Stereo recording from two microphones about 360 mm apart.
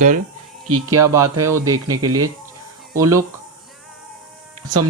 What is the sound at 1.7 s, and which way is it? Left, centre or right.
Speech, right.